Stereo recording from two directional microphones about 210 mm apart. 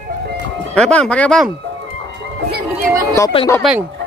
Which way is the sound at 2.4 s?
45° right (ahead or behind).